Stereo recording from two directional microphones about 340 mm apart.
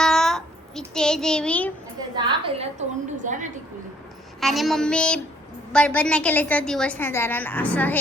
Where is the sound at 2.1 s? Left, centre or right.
Centre.